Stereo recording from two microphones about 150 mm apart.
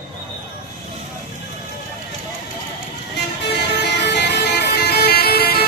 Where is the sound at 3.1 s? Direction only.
90° left.